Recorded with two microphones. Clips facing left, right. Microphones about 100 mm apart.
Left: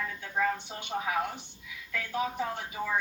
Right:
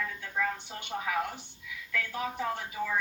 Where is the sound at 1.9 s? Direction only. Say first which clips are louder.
Left 2 dB; 15° left (ahead or behind).